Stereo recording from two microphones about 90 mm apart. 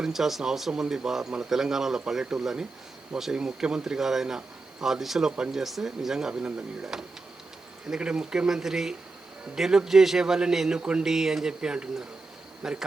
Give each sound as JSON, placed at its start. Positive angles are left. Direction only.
{"t": 0.0, "sound": "speech", "side_deg": -5}